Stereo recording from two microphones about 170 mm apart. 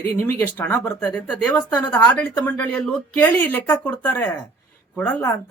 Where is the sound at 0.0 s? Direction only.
15° left (ahead or behind).